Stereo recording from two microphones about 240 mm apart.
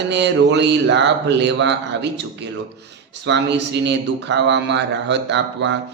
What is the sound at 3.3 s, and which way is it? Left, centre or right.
Speech, right.